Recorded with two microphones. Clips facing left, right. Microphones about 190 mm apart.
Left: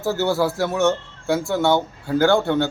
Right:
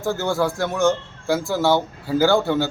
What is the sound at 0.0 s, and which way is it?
A man's voice, 5° left (ahead or behind).